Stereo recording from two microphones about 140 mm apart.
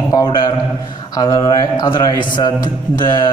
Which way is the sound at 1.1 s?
25° left (ahead or behind).